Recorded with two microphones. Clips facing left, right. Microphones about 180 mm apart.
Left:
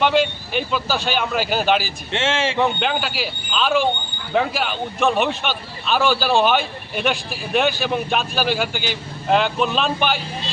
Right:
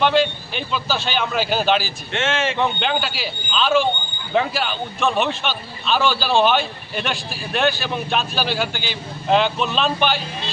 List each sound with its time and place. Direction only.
0.0 s a man's voice: 10° left (ahead or behind)
2.1 s speech: 30° left (ahead or behind)
2.6 s a man's voice: 5° left (ahead or behind)